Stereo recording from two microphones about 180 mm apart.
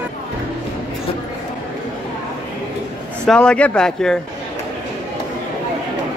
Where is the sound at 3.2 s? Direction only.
5° left (ahead or behind).